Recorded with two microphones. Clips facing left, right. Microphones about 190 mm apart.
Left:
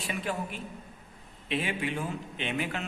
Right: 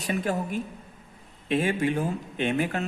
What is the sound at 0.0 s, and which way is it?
Speech, 45° right (ahead or behind).